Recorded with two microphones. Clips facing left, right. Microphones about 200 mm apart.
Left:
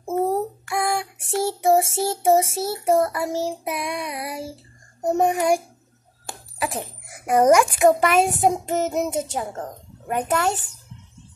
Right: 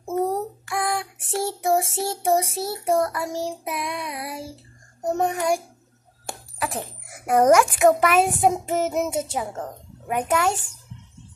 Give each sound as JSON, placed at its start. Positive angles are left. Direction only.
{"t": 0.3, "sound": "child singing", "side_deg": 0}
{"t": 6.8, "sound": "a child's voice", "side_deg": 10}
{"t": 7.8, "sound": "a child's voice", "side_deg": -5}